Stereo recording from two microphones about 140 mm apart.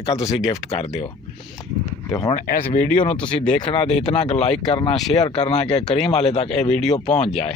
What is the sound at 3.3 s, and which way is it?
Speech, 35° left (ahead or behind).